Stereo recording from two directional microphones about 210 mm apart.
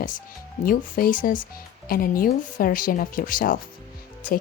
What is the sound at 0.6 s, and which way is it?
Speech, 40° left (ahead or behind).